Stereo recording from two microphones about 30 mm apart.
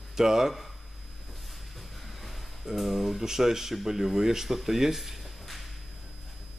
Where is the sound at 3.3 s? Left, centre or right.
Centre.